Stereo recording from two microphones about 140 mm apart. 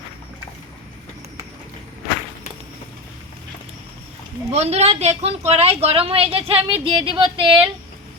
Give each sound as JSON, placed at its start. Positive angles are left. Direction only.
{"t": 4.5, "sound": "a woman's voice", "side_deg": -50}